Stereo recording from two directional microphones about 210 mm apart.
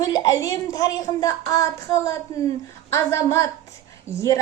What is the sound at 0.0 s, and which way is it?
A woman's voice, 15° left (ahead or behind).